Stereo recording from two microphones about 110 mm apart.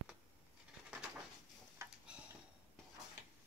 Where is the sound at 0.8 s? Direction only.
5° right (ahead or behind).